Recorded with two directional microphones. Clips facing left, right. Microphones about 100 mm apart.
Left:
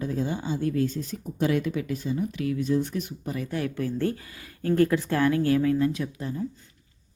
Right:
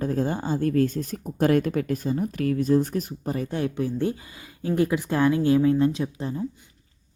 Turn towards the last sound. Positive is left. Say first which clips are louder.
# right 2 dB
turn(degrees=-30)  # may be behind; listen again after turning